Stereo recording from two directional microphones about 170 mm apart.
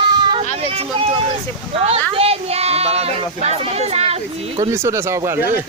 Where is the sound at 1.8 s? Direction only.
35° right (ahead or behind).